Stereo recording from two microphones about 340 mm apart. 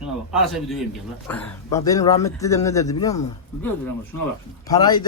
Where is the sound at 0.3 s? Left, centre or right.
Centre.